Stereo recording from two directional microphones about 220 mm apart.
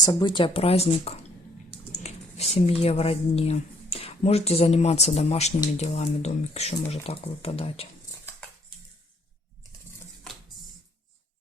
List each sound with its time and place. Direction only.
0.0 s speech: 15° left (ahead or behind)